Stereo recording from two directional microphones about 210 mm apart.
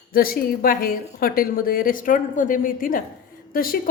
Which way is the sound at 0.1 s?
45° left (ahead or behind).